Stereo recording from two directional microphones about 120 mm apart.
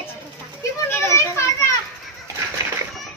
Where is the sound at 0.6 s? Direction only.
20° left (ahead or behind).